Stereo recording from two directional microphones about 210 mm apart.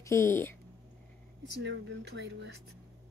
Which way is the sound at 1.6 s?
55° right (ahead or behind).